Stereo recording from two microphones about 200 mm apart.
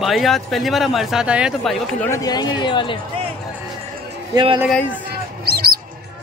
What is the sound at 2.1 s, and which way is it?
Speech, 20° left (ahead or behind).